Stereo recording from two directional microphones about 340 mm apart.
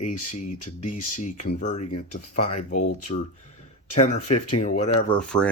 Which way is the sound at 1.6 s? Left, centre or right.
Centre.